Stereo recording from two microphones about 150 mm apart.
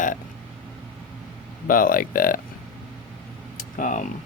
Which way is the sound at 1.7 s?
70° left (ahead or behind).